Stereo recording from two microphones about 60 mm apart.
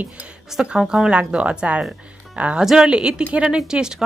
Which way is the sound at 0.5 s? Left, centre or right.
Centre.